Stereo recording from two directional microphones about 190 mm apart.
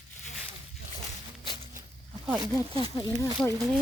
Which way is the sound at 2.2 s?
10° right (ahead or behind).